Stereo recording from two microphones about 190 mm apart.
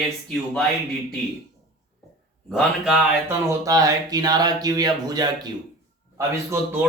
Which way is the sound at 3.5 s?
20° right (ahead or behind).